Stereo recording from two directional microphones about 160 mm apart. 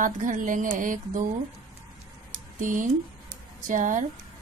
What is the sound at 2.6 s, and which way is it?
A woman's voice, 55° right (ahead or behind).